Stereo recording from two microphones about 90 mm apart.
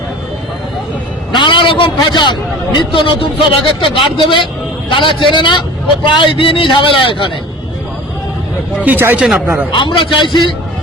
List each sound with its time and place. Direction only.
1.3 s a man's voice: 60° left (ahead or behind)
8.8 s speech: 20° right (ahead or behind)
9.2 s speech: 5° right (ahead or behind)
9.7 s a man's voice: 60° left (ahead or behind)